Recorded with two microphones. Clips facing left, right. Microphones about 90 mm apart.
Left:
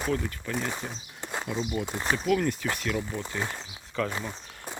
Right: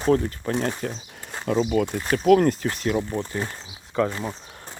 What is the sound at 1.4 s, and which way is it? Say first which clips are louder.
Speech: right 11 dB; 85° right.